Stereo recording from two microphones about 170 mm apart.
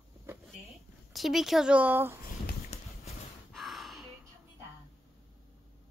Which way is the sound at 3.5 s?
Centre (ahead or behind).